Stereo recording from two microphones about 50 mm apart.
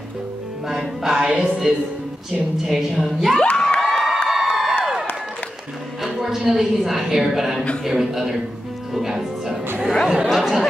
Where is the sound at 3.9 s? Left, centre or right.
Centre.